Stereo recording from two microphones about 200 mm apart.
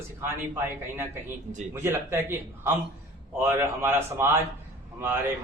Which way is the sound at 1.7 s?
10° right (ahead or behind).